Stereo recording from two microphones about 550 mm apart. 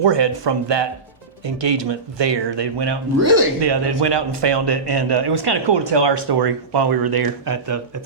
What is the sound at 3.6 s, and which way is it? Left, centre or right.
Speech, right.